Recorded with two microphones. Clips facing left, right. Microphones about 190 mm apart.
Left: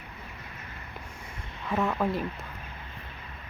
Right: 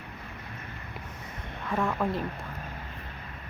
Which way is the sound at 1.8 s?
5° left (ahead or behind).